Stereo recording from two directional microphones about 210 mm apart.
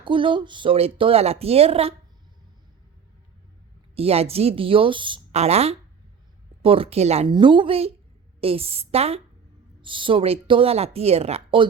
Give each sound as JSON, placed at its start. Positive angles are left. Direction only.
{"t": 0.0, "sound": "speech", "side_deg": -25}
{"t": 3.9, "sound": "speech", "side_deg": -30}